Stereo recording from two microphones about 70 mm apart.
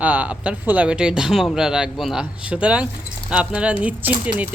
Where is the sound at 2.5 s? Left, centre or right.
Centre.